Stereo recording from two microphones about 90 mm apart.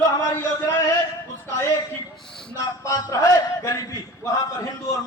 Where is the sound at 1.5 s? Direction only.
30° left (ahead or behind).